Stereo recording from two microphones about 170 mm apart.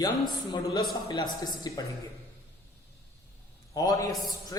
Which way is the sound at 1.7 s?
20° left (ahead or behind).